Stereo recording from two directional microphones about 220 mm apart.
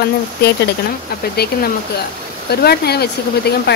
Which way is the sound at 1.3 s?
45° left (ahead or behind).